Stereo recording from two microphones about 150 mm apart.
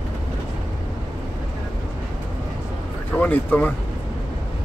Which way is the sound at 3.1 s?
10° left (ahead or behind).